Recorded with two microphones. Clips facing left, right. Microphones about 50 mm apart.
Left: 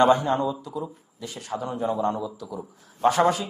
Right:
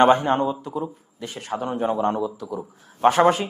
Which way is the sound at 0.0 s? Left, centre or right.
Right.